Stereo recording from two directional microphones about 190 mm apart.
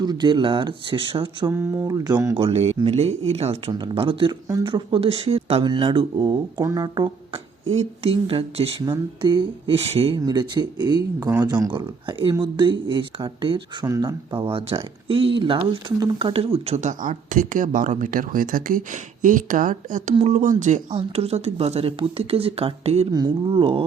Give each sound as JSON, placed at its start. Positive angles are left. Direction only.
{"t": 0.0, "sound": "speech", "side_deg": -20}
{"t": 2.3, "sound": "speech", "side_deg": -30}
{"t": 7.7, "sound": "speech", "side_deg": -35}
{"t": 10.2, "sound": "speech", "side_deg": -20}
{"t": 14.4, "sound": "speech", "side_deg": -30}
{"t": 23.1, "sound": "speech", "side_deg": -25}